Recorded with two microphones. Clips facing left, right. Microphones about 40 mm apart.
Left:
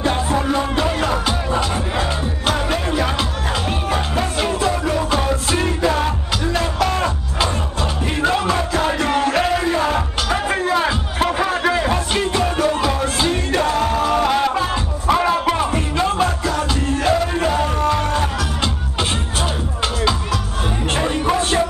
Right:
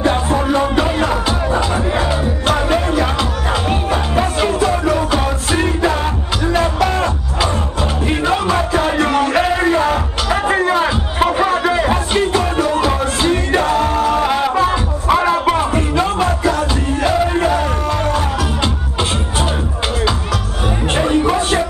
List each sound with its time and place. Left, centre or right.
0.0 s music: centre
3.6 s music: centre
11.3 s music: right
11.8 s music: centre
16.4 s music: right; by 18.2 s centre
20.9 s music: centre